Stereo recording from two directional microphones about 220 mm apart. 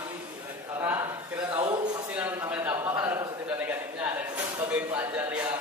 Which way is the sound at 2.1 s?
10° right (ahead or behind).